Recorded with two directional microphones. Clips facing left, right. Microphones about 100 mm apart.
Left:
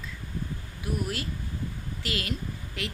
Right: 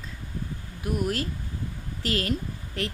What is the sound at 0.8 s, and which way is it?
A woman's voice, 40° right (ahead or behind).